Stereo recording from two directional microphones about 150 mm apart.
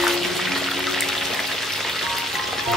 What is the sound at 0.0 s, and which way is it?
Music, centre (ahead or behind).